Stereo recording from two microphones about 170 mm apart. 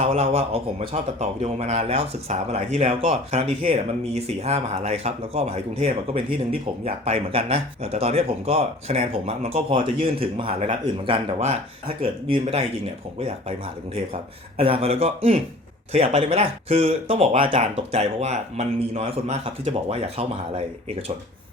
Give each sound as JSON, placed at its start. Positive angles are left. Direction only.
{"t": 0.0, "sound": "speech", "side_deg": -35}